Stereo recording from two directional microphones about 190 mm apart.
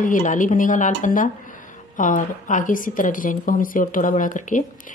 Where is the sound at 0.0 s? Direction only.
40° left (ahead or behind).